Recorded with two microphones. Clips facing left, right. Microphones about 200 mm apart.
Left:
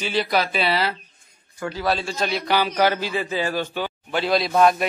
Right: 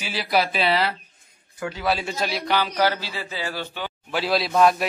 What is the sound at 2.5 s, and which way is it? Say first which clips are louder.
Speech: left 2 dB; 15° left (ahead or behind).